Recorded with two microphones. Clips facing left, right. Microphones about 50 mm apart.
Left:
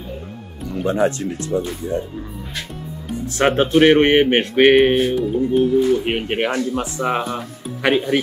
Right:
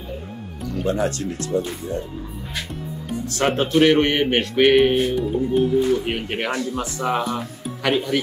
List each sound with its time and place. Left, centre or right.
0.7 s speech: left
3.3 s music: left
5.1 s music: centre
6.0 s music: left